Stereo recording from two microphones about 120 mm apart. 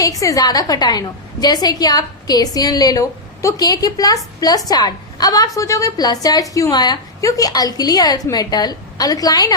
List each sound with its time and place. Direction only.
0.0 s a woman's voice: 30° left (ahead or behind)